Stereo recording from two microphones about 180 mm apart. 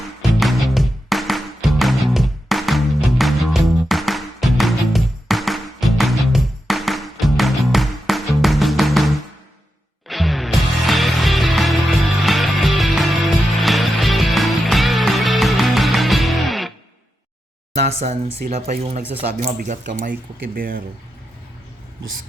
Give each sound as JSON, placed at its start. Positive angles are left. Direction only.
{"t": 0.2, "sound": "music", "side_deg": 0}
{"t": 10.1, "sound": "music", "side_deg": 0}
{"t": 17.7, "sound": "speech", "side_deg": -40}